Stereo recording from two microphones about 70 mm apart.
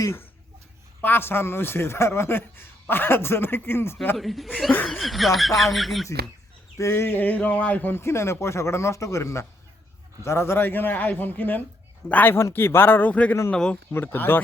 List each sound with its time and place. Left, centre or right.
1.0 s a man's voice: left
4.2 s speech: centre
6.7 s a man's voice: left
12.3 s a man's voice: left; by 13.7 s centre
13.9 s a man's voice: left